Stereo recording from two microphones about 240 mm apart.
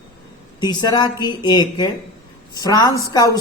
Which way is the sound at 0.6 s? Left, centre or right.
Centre.